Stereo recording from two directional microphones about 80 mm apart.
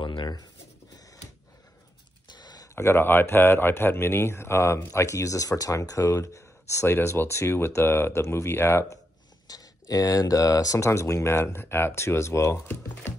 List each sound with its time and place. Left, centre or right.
0.0 s writing: left
2.3 s a sound: left
2.7 s speech: left
9.5 s speech: left